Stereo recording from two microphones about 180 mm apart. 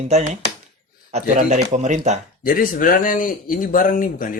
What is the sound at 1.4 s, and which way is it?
Speech, 40° right (ahead or behind).